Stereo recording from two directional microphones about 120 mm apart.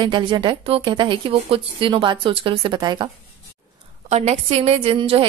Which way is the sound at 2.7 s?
35° right (ahead or behind).